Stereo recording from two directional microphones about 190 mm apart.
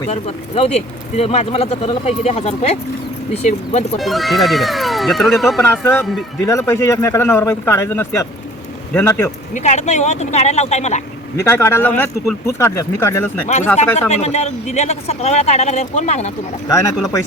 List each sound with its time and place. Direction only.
0.1 s speech: 30° left (ahead or behind)
3.9 s speech: centre (ahead or behind)
5.6 s speech: 10° left (ahead or behind)
9.6 s speech: 35° left (ahead or behind)
11.3 s speech: 15° left (ahead or behind)
14.1 s speech: 35° left (ahead or behind)
16.6 s speech: 20° left (ahead or behind)